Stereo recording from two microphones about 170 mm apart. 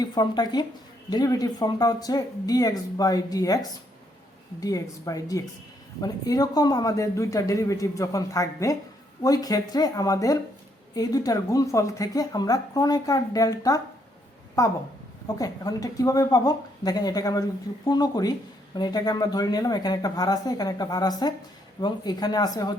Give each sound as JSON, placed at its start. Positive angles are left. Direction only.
{"t": 0.0, "sound": "speech", "side_deg": 25}
{"t": 4.6, "sound": "speech", "side_deg": 20}